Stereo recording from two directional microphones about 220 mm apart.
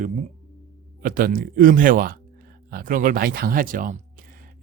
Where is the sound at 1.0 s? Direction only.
40° right (ahead or behind).